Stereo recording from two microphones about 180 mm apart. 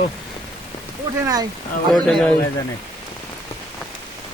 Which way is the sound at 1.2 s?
20° right (ahead or behind).